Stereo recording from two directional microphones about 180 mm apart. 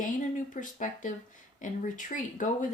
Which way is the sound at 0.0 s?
45° left (ahead or behind).